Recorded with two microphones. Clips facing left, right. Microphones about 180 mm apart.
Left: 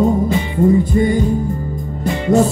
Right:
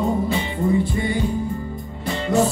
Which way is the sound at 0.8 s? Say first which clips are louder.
Left 8 dB; 45° left (ahead or behind).